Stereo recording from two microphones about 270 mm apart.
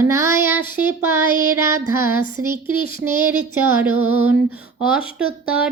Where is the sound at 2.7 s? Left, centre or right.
Centre.